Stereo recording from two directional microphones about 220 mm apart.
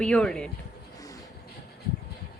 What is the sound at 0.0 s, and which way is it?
Speech, 5° left (ahead or behind).